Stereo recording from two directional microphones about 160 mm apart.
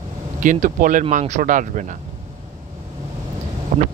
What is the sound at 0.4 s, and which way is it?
Speech, 55° right (ahead or behind).